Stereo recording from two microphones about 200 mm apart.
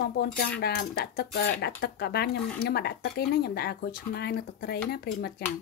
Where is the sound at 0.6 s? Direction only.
55° left (ahead or behind).